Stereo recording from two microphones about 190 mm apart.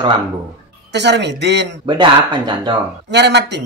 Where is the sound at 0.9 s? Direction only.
65° right (ahead or behind).